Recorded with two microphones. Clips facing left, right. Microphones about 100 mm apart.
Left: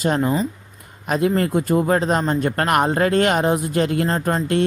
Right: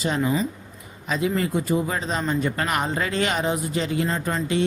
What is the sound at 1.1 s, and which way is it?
A man's voice, 55° left (ahead or behind).